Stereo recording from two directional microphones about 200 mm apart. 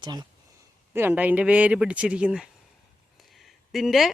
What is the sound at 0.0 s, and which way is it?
Speech, 20° right (ahead or behind).